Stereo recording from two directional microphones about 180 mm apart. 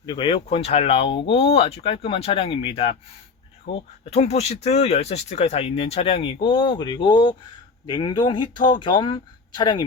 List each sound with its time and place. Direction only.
0.0 s speech: 25° left (ahead or behind)